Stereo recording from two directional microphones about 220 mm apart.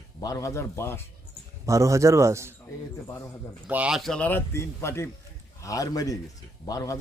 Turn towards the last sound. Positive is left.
turn(degrees=15)  # may be behind; listen again after turning